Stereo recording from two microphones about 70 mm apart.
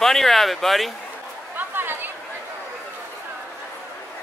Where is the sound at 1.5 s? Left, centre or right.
Right.